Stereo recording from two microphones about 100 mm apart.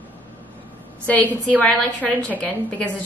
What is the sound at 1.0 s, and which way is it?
A woman's voice, 15° left (ahead or behind).